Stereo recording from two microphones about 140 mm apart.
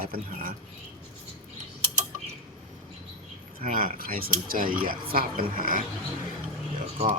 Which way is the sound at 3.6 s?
75° right (ahead or behind).